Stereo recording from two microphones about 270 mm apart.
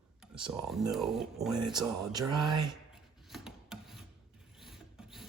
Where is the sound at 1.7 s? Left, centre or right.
Centre.